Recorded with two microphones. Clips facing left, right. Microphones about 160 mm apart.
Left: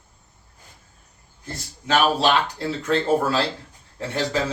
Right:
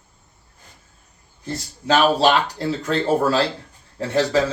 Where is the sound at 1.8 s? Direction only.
35° right (ahead or behind).